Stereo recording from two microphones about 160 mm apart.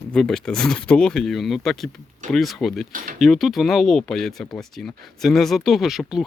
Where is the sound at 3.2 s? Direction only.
Centre (ahead or behind).